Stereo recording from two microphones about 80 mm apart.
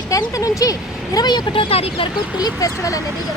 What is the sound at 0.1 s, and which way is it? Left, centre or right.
Speech, left.